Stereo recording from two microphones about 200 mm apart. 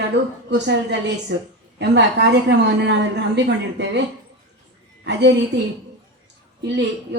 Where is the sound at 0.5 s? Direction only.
60° right (ahead or behind).